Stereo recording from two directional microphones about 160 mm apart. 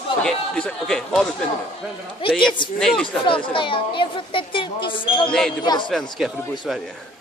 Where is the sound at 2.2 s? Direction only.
35° left (ahead or behind).